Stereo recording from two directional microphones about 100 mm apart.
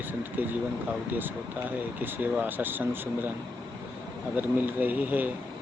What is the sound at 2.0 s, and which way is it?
Speech, 20° right (ahead or behind).